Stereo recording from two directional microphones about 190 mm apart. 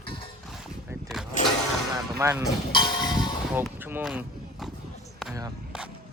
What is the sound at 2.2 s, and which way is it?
Speech, 15° right (ahead or behind).